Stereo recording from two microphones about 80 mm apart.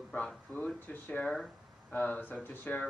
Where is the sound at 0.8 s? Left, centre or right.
Left.